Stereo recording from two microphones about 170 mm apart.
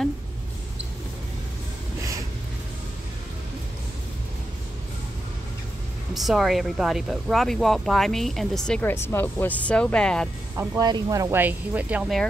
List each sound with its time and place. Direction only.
6.1 s speech: centre (ahead or behind)
10.5 s speech: 15° right (ahead or behind)